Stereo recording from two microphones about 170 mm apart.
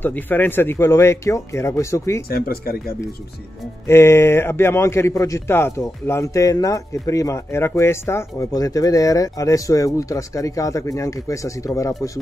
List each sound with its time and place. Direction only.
0.0 s a man's voice: 10° left (ahead or behind)
2.2 s speech: 65° left (ahead or behind)
3.8 s a man's voice: 15° left (ahead or behind)